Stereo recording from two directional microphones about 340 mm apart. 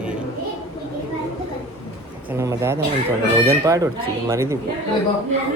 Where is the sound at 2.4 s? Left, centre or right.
Centre.